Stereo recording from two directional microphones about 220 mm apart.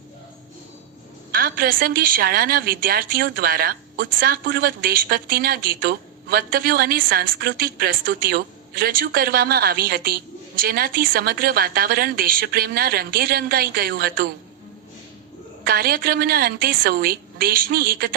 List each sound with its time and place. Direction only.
1.3 s a woman's voice: 40° right (ahead or behind)
15.6 s a woman's voice: 45° right (ahead or behind)